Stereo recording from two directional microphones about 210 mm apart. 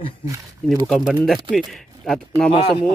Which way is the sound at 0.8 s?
Centre (ahead or behind).